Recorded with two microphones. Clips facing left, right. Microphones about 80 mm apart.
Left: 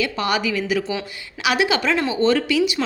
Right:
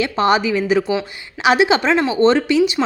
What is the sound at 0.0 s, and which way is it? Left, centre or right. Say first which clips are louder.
A woman's voice: right 6 dB; right.